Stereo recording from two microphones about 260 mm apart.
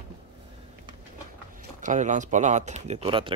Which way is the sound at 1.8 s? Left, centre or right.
Right.